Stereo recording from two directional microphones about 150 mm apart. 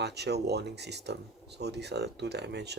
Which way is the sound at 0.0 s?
90° right.